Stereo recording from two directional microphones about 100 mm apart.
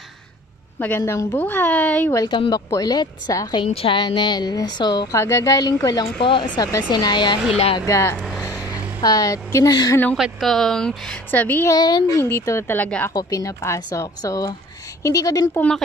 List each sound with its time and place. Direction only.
0.7 s a woman's voice: 20° left (ahead or behind)
2.2 s a woman's voice: 50° left (ahead or behind)
3.6 s a woman's voice: 70° left (ahead or behind); by 5.1 s 45° left (ahead or behind)
5.1 s speech: 30° left (ahead or behind)
6.2 s a woman's voice: 50° left (ahead or behind)
7.8 s speech: 30° left (ahead or behind)
8.2 s vehicle: 5° right (ahead or behind)
9.0 s speech: 35° left (ahead or behind)
10.1 s speech: centre (ahead or behind)
11.2 s speech: 20° left (ahead or behind)
11.7 s speech: 40° left (ahead or behind)
12.2 s speech: 25° left (ahead or behind)
13.1 s speech: 40° left (ahead or behind)